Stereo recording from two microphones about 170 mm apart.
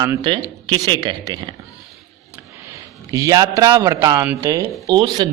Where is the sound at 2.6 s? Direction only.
20° right (ahead or behind).